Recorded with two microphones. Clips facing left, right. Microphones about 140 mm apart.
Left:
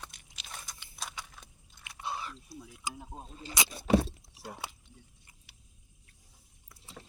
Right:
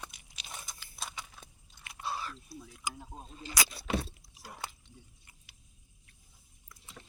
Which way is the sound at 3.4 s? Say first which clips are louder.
Even; 20° left (ahead or behind).